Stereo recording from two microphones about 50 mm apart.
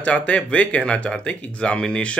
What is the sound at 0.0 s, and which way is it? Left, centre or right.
Speech, left.